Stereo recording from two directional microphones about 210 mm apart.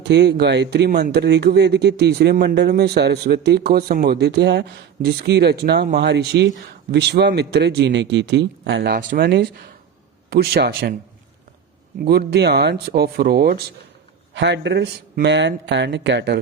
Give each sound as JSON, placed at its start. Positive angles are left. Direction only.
{"t": 0.0, "sound": "speech", "side_deg": -55}
{"t": 12.0, "sound": "speech", "side_deg": -50}